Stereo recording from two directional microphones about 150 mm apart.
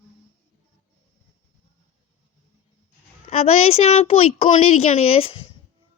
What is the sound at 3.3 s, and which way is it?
Speech, 45° left (ahead or behind).